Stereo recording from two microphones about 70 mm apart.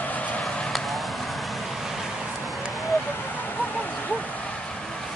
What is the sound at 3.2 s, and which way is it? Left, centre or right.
Vehicle, left.